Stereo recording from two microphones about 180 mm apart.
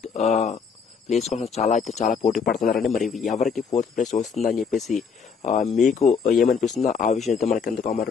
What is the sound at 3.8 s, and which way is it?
Speech, 40° left (ahead or behind).